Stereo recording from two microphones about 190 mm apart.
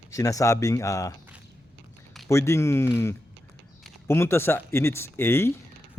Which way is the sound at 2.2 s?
15° left (ahead or behind).